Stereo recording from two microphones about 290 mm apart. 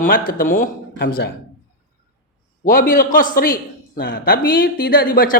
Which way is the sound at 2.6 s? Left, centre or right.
Left.